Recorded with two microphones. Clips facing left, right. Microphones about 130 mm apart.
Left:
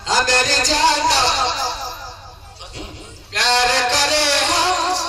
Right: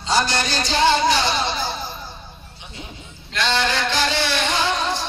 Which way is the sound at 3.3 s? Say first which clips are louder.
Left 4 dB; 90° left.